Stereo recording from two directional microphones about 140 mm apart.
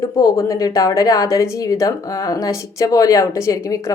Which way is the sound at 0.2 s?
25° left (ahead or behind).